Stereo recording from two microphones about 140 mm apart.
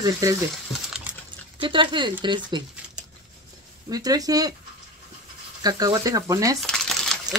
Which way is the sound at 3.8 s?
25° right (ahead or behind).